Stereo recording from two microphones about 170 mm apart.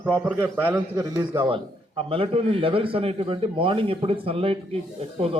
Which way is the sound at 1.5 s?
30° right (ahead or behind).